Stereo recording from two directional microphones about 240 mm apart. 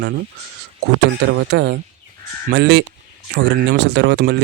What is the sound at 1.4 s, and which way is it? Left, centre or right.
Speech, right.